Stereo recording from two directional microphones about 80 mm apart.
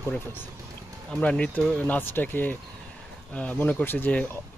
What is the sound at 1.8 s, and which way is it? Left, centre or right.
Speech, left.